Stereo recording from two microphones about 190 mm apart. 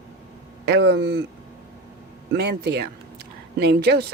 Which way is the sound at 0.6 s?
65° right (ahead or behind).